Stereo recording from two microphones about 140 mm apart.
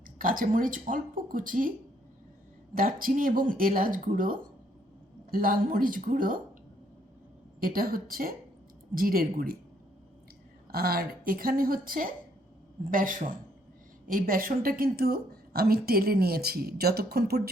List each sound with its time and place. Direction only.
0.2 s speech: 80° right
2.7 s speech: 90° right
5.3 s speech: 90° right
7.6 s a woman's voice: 90° right
10.7 s a woman's voice: 90° right
12.9 s speech: 75° right (ahead or behind)
14.1 s a woman's voice: 85° right